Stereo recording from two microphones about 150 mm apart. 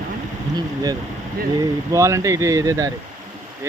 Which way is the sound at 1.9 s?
20° right (ahead or behind).